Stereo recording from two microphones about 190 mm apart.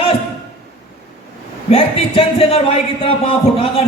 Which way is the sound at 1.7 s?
30° left (ahead or behind).